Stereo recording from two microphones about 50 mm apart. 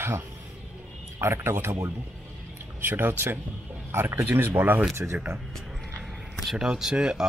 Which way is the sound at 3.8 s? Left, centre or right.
Right.